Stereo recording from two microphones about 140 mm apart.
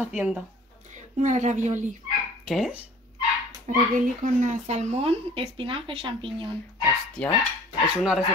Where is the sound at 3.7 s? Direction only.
65° right (ahead or behind); by 6.5 s 35° right (ahead or behind).